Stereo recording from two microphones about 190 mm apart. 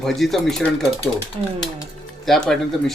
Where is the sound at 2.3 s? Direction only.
Centre (ahead or behind).